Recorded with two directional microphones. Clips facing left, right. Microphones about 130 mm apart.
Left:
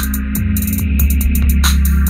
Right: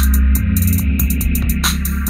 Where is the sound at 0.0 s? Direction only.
Centre (ahead or behind).